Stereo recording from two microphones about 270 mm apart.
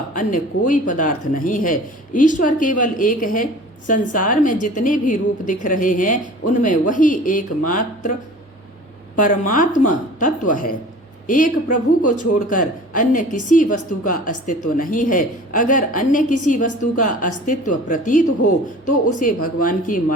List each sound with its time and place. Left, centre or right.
0.1 s a woman's voice: left
9.1 s a woman's voice: left